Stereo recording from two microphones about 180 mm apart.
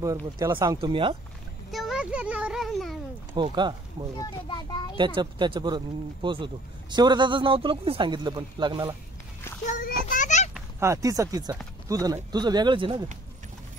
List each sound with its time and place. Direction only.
0.4 s speech: 15° right (ahead or behind)
0.7 s a man's voice: 30° right (ahead or behind)
1.7 s a child's voice: centre (ahead or behind)
3.4 s a man's voice: 25° right (ahead or behind)
4.2 s a child's voice: 25° left (ahead or behind)
4.9 s a man's voice: 25° right (ahead or behind)
9.7 s a child's voice: 45° left (ahead or behind)
10.8 s a man's voice: 15° right (ahead or behind)